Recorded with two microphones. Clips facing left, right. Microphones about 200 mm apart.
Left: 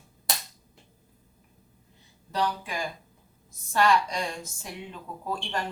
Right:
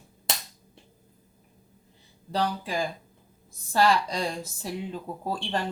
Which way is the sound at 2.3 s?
30° right (ahead or behind).